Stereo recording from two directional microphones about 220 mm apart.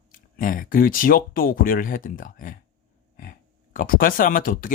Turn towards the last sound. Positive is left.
turn(degrees=40)  # may be behind; listen again after turning